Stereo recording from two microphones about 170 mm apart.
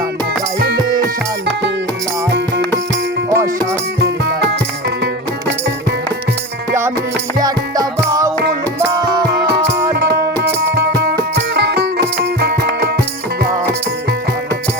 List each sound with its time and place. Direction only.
3.2 s music: 20° right (ahead or behind)
7.3 s music: 25° right (ahead or behind)
9.9 s music: 70° right (ahead or behind)